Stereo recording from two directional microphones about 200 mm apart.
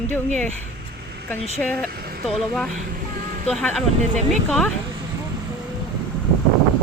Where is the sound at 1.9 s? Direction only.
50° right (ahead or behind).